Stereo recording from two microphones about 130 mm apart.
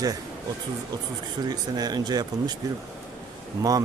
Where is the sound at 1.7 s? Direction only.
30° right (ahead or behind).